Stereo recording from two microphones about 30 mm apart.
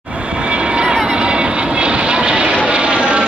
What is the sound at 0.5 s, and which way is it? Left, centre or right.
Vehicle, right.